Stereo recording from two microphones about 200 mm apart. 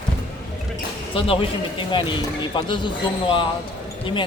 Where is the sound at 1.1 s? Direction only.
25° left (ahead or behind).